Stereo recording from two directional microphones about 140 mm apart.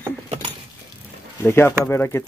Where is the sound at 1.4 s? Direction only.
15° left (ahead or behind).